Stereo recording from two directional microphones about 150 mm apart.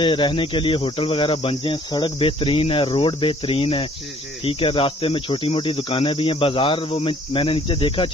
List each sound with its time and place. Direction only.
0.0 s cricket: 35° left (ahead or behind)